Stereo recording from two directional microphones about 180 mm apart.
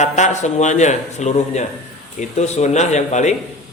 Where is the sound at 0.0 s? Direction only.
40° left (ahead or behind).